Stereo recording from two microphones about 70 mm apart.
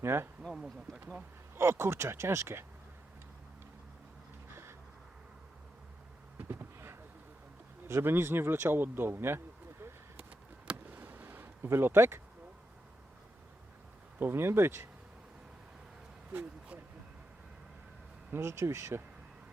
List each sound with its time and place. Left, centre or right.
0.0 s speech: right
0.4 s speech: centre
1.5 s speech: right
6.5 s a sound: right
7.9 s speech: right
10.7 s a sound: right
14.2 s speech: right
18.3 s speech: right